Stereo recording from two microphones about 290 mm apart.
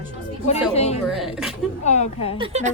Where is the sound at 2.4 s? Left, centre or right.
Right.